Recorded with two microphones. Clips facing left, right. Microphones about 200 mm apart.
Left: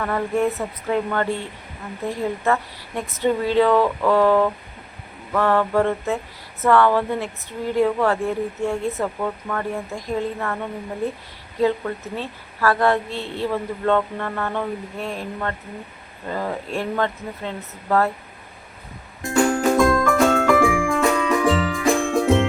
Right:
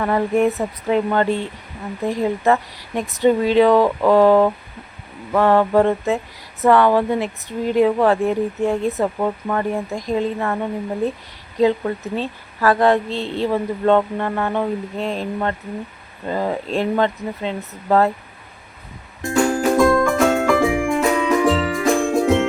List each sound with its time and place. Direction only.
0.0 s a woman's voice: 20° right (ahead or behind)
11.6 s a woman's voice: 20° right (ahead or behind)
19.2 s music: centre (ahead or behind)